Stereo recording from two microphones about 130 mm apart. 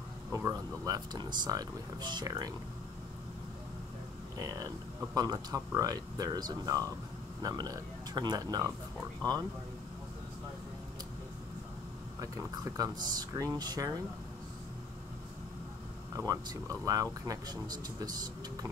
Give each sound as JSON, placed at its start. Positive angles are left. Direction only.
{"t": 0.3, "sound": "speech", "side_deg": -25}
{"t": 4.4, "sound": "speech", "side_deg": -25}
{"t": 12.2, "sound": "speech", "side_deg": -25}
{"t": 16.3, "sound": "speech", "side_deg": -25}